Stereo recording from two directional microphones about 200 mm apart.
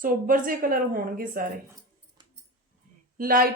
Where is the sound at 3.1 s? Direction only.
45° right (ahead or behind).